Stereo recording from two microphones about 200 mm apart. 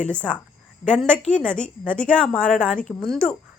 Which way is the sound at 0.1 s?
5° left (ahead or behind).